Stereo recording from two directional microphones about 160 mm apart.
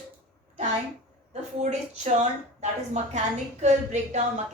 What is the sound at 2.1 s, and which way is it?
A woman's voice, 45° right (ahead or behind).